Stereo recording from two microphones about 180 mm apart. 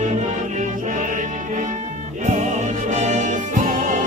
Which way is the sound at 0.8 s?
45° right (ahead or behind).